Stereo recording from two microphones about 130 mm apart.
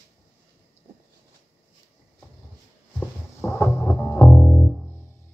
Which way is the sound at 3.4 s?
20° left (ahead or behind).